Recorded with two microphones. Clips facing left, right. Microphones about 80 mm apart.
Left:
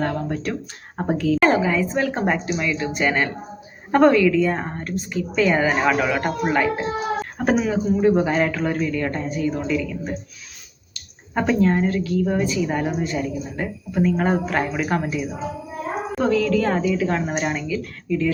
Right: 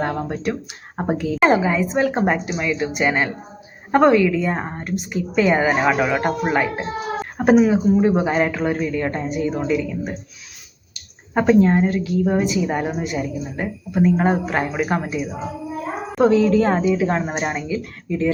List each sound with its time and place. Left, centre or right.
0.0 s a woman's voice: right